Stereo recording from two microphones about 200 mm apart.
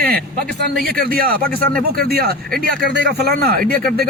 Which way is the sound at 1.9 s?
50° right (ahead or behind).